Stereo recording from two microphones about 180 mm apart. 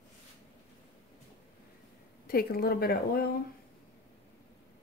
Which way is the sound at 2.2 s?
55° left (ahead or behind).